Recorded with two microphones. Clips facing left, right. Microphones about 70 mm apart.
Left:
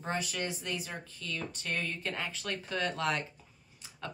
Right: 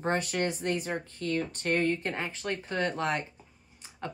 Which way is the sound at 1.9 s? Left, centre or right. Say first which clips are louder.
Right 4 dB; right.